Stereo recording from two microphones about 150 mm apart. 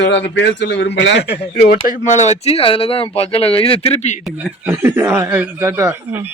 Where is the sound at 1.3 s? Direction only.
90° left.